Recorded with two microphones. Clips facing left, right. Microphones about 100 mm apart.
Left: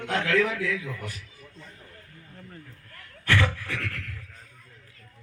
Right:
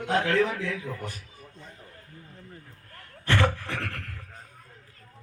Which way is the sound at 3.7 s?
45° right (ahead or behind).